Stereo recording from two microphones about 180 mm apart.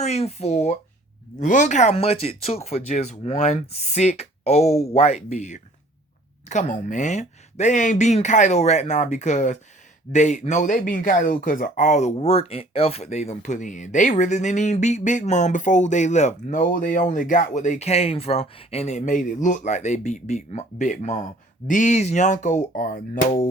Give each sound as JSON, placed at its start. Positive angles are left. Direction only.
{"t": 0.0, "sound": "speech", "side_deg": 35}